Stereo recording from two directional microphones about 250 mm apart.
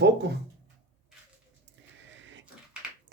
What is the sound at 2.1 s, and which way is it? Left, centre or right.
Printer, right.